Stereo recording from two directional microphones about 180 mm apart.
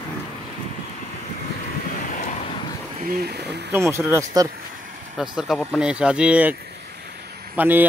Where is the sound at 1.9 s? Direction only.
50° left (ahead or behind).